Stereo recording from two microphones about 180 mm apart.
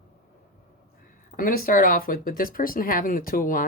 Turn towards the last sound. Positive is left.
turn(degrees=50)  # may be behind; listen again after turning